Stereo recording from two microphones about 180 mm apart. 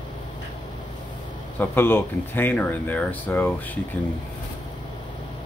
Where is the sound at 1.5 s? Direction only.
10° left (ahead or behind).